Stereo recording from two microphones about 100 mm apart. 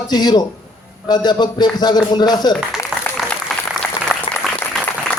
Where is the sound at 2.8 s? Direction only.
25° left (ahead or behind).